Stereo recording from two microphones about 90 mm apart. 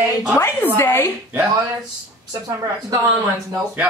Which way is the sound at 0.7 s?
25° left (ahead or behind).